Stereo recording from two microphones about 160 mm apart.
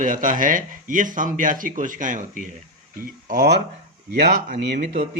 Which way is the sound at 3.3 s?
80° right.